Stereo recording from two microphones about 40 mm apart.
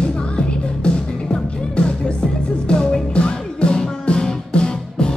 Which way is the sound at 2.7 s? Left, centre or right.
Left.